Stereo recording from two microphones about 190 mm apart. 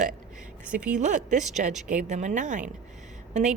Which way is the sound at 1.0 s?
40° right (ahead or behind).